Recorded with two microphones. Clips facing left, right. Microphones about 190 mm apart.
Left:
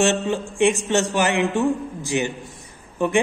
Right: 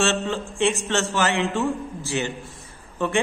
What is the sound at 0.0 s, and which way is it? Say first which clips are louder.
A man's voice: left 3 dB; 15° left (ahead or behind).